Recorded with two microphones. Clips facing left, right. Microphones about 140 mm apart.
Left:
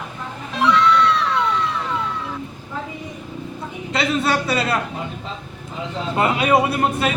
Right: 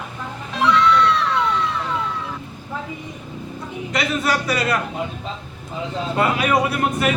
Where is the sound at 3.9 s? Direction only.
25° left (ahead or behind).